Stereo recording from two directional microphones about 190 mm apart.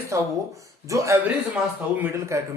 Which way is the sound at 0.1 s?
15° right (ahead or behind).